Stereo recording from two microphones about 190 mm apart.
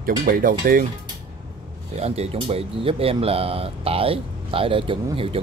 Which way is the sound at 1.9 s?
35° right (ahead or behind).